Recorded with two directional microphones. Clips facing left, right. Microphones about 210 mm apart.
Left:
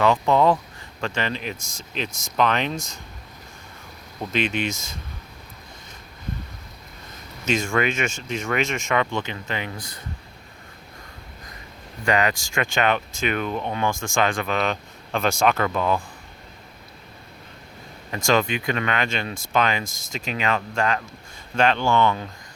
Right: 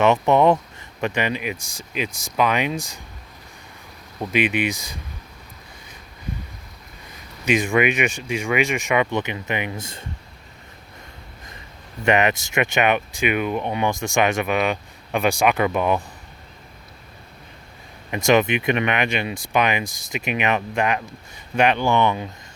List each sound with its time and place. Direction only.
0.0 s speech: 20° right (ahead or behind)
4.2 s speech: 10° right (ahead or behind)
7.4 s speech: 15° right (ahead or behind)
12.0 s speech: 20° right (ahead or behind)
18.1 s speech: 20° right (ahead or behind)